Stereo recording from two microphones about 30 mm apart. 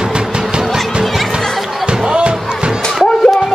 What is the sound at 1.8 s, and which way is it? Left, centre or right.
Music, right.